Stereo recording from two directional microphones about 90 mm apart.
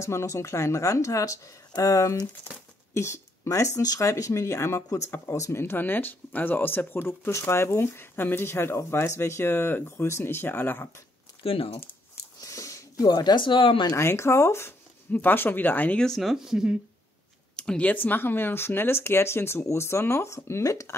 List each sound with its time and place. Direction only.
0.0 s speech: 30° left (ahead or behind)
11.4 s speech: 90° left
12.4 s a sound: 35° left (ahead or behind)
13.1 s speech: 55° left (ahead or behind)
13.9 s speech: 30° left (ahead or behind)
16.0 s speech: centre (ahead or behind)
17.6 s speech: 10° left (ahead or behind); by 20.9 s 35° left (ahead or behind)